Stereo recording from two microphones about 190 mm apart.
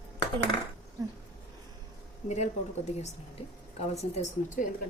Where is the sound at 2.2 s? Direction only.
35° left (ahead or behind).